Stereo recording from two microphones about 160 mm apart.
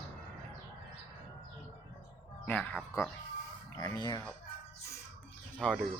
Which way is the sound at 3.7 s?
25° left (ahead or behind).